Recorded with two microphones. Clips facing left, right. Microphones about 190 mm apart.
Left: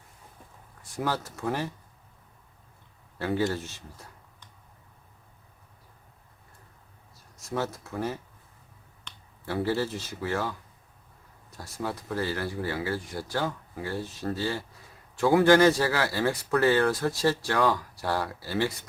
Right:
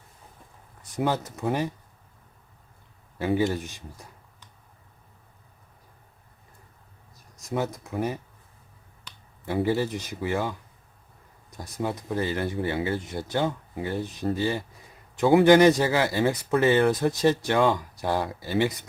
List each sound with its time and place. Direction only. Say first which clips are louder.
0.8 s speech: right 4 dB; 20° right (ahead or behind)
3.2 s speech: right 3 dB; 15° right (ahead or behind)
7.3 s speech: right 2 dB; 15° right (ahead or behind)
9.6 s speech: right 3 dB; 15° right (ahead or behind)
11.5 s speech: right 4 dB; 20° right (ahead or behind)